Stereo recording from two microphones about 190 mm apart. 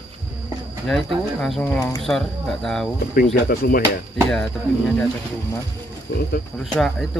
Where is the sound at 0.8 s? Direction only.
Centre (ahead or behind).